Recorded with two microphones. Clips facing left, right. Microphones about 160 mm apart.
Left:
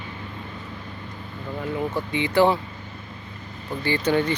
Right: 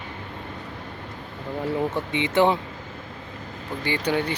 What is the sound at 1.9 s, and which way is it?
Speech, 20° right (ahead or behind).